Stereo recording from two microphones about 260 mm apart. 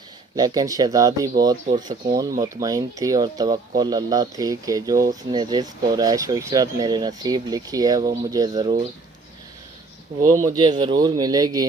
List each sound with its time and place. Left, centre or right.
0.3 s speech: centre
10.3 s speech: centre